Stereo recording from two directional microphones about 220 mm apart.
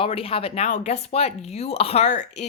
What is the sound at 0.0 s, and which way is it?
Speech, 25° left (ahead or behind).